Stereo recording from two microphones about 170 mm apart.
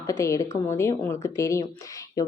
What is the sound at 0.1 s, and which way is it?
Speech, 15° left (ahead or behind).